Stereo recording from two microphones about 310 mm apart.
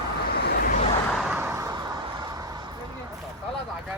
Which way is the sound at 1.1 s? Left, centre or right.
Centre.